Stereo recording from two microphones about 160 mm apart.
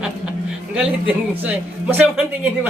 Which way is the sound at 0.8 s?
10° right (ahead or behind).